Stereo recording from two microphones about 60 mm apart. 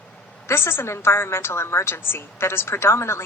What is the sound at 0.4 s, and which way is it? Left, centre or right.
A woman's voice, left.